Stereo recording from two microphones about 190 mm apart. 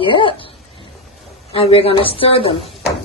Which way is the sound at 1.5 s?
30° left (ahead or behind).